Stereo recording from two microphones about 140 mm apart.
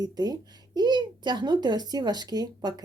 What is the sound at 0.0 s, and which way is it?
A woman's voice, 30° right (ahead or behind).